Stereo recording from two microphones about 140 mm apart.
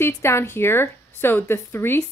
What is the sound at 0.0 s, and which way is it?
A woman's voice, 20° left (ahead or behind).